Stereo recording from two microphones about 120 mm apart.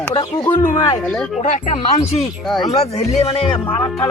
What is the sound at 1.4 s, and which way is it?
Speech, 80° left.